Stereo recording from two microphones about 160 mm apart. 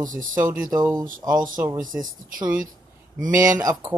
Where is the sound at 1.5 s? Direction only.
15° right (ahead or behind).